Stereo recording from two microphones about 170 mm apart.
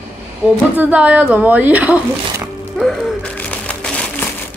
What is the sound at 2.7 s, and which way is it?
Music, centre (ahead or behind).